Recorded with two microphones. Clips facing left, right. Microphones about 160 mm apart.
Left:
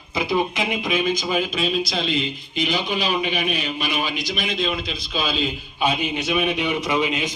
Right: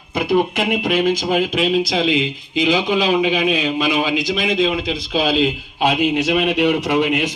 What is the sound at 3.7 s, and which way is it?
A man's voice, 90° right.